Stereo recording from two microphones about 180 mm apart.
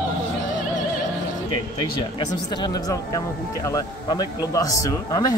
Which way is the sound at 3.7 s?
20° left (ahead or behind).